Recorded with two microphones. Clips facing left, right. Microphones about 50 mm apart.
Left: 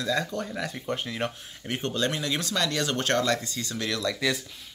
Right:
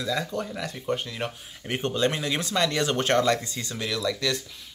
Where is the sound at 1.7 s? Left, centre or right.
Centre.